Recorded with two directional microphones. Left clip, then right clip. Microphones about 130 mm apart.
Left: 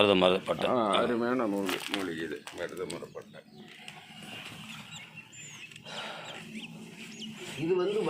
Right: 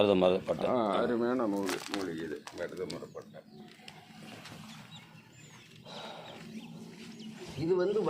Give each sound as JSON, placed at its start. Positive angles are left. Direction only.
{"t": 0.0, "sound": "a man's voice", "side_deg": -5}
{"t": 0.7, "sound": "speech", "side_deg": 20}
{"t": 1.6, "sound": "speech", "side_deg": -20}
{"t": 2.0, "sound": "speech", "side_deg": 20}
{"t": 5.9, "sound": "dog", "side_deg": -15}
{"t": 7.5, "sound": "speech", "side_deg": 0}